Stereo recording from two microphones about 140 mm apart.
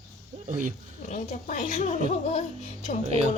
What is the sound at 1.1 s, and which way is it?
Speech, 65° left (ahead or behind).